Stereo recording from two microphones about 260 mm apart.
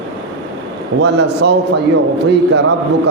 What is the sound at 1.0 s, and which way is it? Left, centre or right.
A man's voice, right.